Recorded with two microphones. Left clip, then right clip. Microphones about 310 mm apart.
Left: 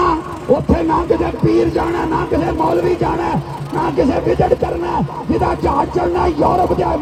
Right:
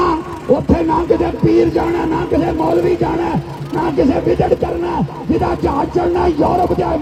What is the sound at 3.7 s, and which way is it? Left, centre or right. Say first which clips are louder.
Speech: right 1 dB; left.